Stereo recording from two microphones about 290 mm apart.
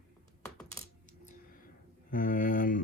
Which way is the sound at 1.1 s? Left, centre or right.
Left.